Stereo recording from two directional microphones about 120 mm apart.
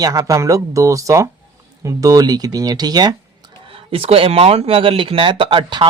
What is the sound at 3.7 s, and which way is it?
Speech, 50° right (ahead or behind).